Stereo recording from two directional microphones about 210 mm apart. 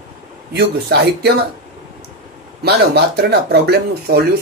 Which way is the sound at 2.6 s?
50° right (ahead or behind).